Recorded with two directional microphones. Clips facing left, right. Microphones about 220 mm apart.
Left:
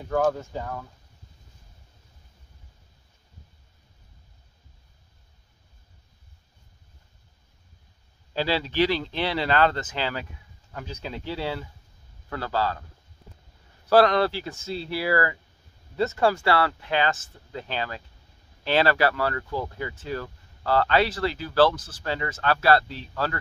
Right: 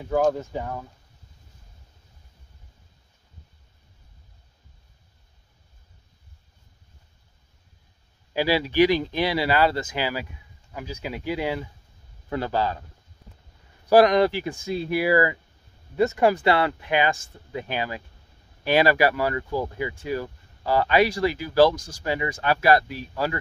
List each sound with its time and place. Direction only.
0.1 s speech: 10° right (ahead or behind)
8.3 s speech: 10° right (ahead or behind)
13.8 s speech: 15° right (ahead or behind)